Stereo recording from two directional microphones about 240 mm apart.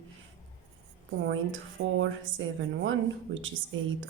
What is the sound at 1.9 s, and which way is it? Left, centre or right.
A woman's voice, right.